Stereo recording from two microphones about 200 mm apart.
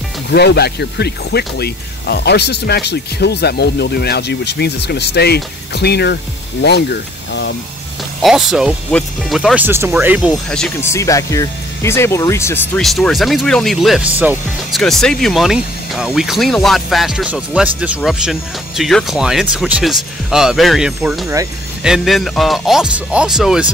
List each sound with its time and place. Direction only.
0.3 s speech: 55° left (ahead or behind)
8.2 s speech: centre (ahead or behind)
10.5 s speech: 5° left (ahead or behind)
10.9 s speech: 15° left (ahead or behind)
12.8 s speech: centre (ahead or behind)